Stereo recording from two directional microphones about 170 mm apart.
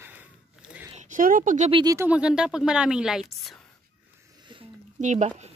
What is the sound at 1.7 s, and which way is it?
Speech, 20° right (ahead or behind).